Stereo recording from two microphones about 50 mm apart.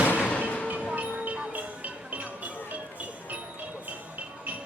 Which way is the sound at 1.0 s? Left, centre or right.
Right.